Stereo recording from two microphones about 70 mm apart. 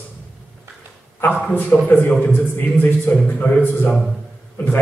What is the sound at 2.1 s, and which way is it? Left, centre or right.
Speech, centre.